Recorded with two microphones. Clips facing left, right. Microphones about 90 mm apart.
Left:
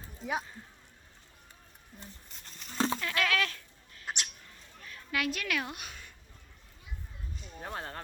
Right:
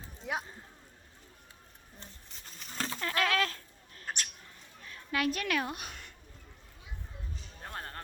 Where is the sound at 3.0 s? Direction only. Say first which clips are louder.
Right 1 dB; 35° right (ahead or behind).